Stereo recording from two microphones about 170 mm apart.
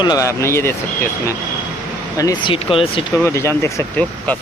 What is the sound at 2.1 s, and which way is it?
Speech, 20° left (ahead or behind).